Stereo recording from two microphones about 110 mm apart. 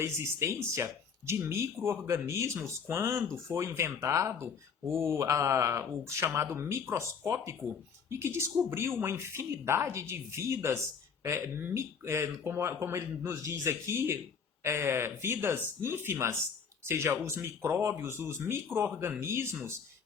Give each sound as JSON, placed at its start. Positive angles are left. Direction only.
{"t": 0.0, "sound": "speech", "side_deg": -25}